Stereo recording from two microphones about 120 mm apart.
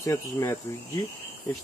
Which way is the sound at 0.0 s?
25° left (ahead or behind).